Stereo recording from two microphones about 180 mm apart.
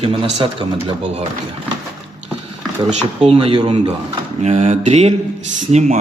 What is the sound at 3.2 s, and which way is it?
Speech, 30° right (ahead or behind).